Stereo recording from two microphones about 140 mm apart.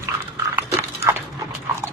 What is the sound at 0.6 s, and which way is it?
Dog, 15° right (ahead or behind).